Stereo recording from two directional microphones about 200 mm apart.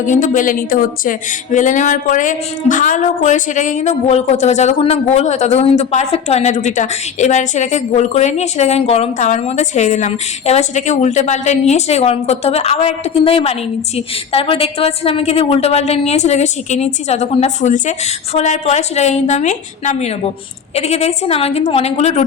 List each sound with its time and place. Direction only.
0.0 s a woman's voice: 40° left (ahead or behind)